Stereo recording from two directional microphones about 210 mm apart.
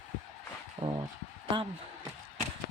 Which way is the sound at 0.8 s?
25° right (ahead or behind).